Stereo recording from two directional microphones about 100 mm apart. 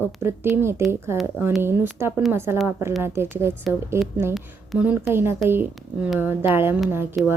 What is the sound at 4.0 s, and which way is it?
Speech, centre (ahead or behind).